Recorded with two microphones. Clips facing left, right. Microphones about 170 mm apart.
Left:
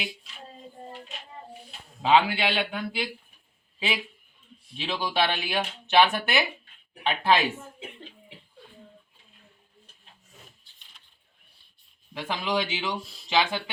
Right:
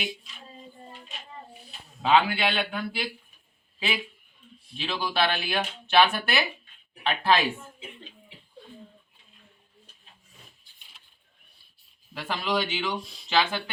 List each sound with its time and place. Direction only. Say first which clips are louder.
2.0 s speech: left 1 dB; 20° left (ahead or behind)
4.8 s speech: even; 20° left (ahead or behind)
10.7 s a sound: right 1 dB; 10° right (ahead or behind)
12.1 s speech: even; 15° left (ahead or behind)